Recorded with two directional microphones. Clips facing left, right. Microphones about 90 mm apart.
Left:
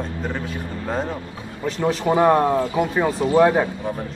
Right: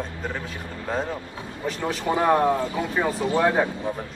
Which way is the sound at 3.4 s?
15° left (ahead or behind).